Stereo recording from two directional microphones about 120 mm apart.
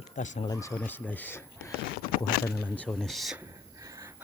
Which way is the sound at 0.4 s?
25° left (ahead or behind).